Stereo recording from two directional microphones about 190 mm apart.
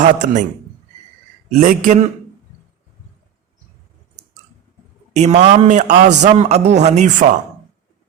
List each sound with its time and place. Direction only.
0.0 s a man's voice: 40° right (ahead or behind)
1.6 s speech: 40° right (ahead or behind)
5.1 s speech: 35° right (ahead or behind)